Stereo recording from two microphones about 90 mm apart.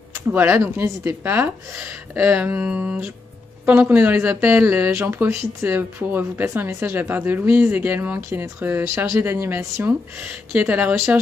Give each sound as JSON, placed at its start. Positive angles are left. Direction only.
{"t": 0.3, "sound": "speech", "side_deg": -20}
{"t": 8.9, "sound": "speech", "side_deg": -35}
{"t": 10.2, "sound": "speech", "side_deg": -20}